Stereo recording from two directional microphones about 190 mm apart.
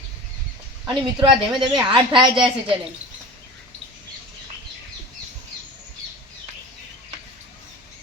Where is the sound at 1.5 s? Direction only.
25° right (ahead or behind).